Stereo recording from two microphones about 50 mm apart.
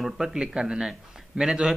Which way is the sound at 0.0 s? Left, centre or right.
Centre.